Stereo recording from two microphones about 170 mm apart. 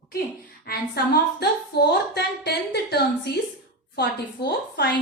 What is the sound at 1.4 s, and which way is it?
A woman's voice, 75° left (ahead or behind).